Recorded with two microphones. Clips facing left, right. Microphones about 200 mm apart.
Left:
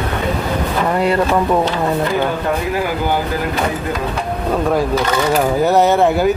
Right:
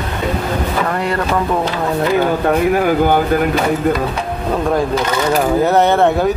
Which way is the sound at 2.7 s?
55° right (ahead or behind).